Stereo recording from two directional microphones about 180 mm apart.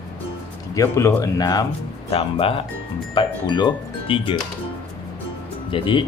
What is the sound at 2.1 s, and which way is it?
Speech, 30° left (ahead or behind).